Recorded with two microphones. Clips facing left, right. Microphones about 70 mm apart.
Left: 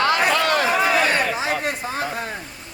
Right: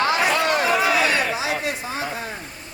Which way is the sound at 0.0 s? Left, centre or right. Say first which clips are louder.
Left 1 dB; left.